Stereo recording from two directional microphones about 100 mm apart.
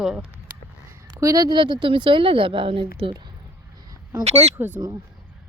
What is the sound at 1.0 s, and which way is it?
Speech, 40° right (ahead or behind).